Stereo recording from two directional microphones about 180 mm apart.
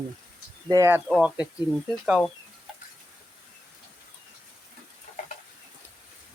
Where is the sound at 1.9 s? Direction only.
Centre (ahead or behind).